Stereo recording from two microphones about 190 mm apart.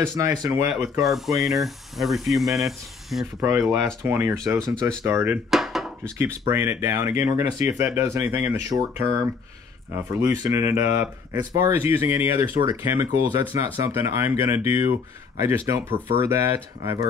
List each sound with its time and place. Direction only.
0.0 s speech: 15° right (ahead or behind)
1.0 s speech: centre (ahead or behind)
3.3 s speech: 15° right (ahead or behind)
5.5 s dishes: centre (ahead or behind)
6.5 s speech: 15° right (ahead or behind)
10.4 s speech: 15° right (ahead or behind)